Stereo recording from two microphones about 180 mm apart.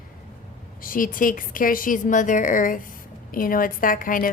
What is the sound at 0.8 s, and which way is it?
Speech, 50° left (ahead or behind).